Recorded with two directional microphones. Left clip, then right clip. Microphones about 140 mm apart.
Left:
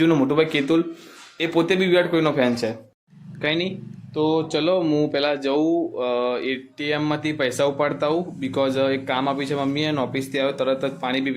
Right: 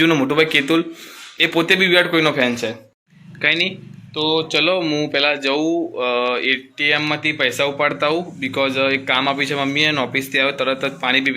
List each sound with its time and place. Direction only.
0.0 s a man's voice: 5° left (ahead or behind)
3.4 s a man's voice: 20° left (ahead or behind)
4.1 s speech: 40° left (ahead or behind)
4.5 s speech: 25° left (ahead or behind)
8.6 s speech: 30° left (ahead or behind)
9.0 s speech: 20° left (ahead or behind)